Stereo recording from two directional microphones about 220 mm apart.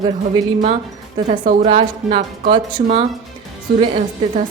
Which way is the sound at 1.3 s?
30° right (ahead or behind).